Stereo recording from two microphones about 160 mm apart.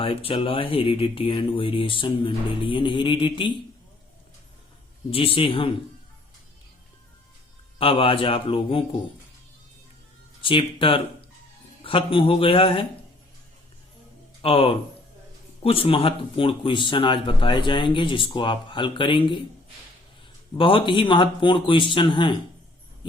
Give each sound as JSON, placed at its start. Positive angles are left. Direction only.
{"t": 0.0, "sound": "speech", "side_deg": 35}
{"t": 5.1, "sound": "speech", "side_deg": 35}
{"t": 7.8, "sound": "speech", "side_deg": 35}
{"t": 10.4, "sound": "speech", "side_deg": 30}
{"t": 14.4, "sound": "speech", "side_deg": 35}
{"t": 20.6, "sound": "speech", "side_deg": 30}